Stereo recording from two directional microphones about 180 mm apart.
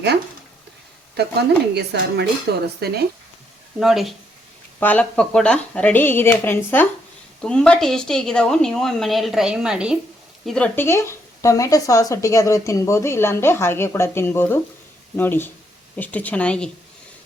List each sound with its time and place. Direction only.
1.1 s speech: 65° right (ahead or behind)
3.8 s a woman's voice: centre (ahead or behind)